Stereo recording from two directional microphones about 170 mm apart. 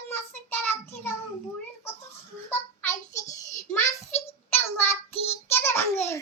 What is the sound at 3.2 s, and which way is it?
Child singing, 45° left (ahead or behind).